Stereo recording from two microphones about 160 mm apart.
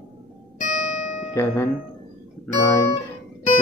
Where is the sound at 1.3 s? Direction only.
15° left (ahead or behind).